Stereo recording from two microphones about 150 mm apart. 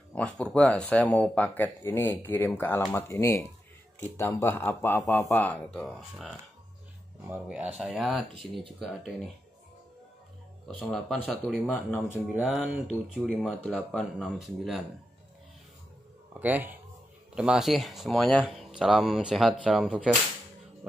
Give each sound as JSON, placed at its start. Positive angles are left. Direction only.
{"t": 0.1, "sound": "speech", "side_deg": 5}
{"t": 10.9, "sound": "speech", "side_deg": 5}
{"t": 12.4, "sound": "speech", "side_deg": -5}
{"t": 16.3, "sound": "speech", "side_deg": -10}